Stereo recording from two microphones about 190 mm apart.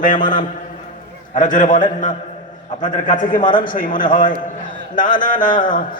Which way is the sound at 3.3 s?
25° left (ahead or behind).